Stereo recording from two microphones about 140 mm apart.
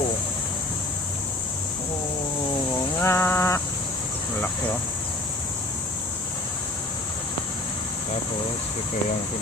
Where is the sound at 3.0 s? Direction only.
20° left (ahead or behind).